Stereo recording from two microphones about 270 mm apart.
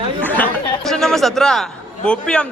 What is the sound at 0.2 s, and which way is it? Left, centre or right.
Speech, centre.